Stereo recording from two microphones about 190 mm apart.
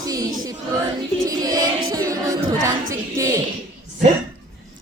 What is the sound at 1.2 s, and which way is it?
Music, 20° right (ahead or behind).